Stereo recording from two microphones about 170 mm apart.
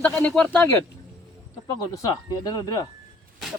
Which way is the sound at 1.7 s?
20° left (ahead or behind).